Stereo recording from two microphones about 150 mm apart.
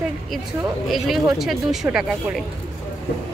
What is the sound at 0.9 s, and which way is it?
Speech, centre (ahead or behind).